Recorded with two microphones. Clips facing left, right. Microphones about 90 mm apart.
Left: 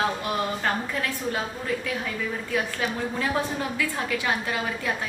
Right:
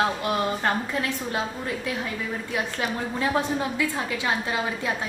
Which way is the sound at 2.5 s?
20° right (ahead or behind).